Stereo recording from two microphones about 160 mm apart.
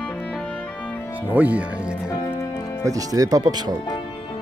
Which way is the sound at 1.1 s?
10° right (ahead or behind).